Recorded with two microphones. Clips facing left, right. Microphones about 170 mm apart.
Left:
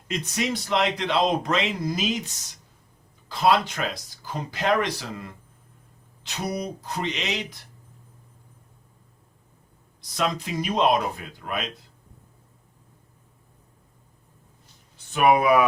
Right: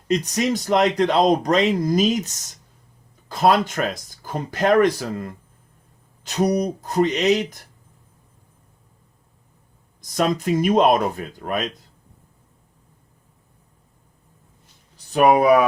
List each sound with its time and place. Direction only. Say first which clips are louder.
0.1 s speech: right 7 dB; 40° right (ahead or behind)
10.0 s speech: right 6 dB; 45° right (ahead or behind)
14.9 s speech: right 4 dB; 35° right (ahead or behind)